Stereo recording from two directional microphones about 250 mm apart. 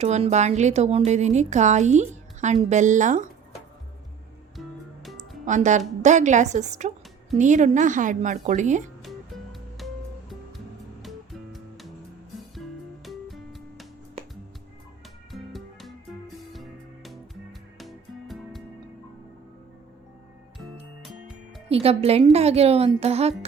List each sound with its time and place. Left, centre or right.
0.0 s a woman's voice: right
5.5 s a woman's voice: right
9.0 s music: centre
13.1 s music: centre
15.3 s music: centre
21.7 s a woman's voice: right